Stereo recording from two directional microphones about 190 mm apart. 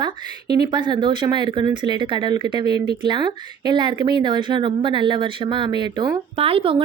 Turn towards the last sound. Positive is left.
turn(degrees=-30)  # may be behind; listen again after turning